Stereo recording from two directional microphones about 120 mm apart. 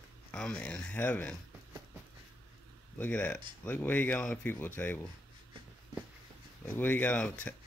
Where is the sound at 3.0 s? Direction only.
10° left (ahead or behind).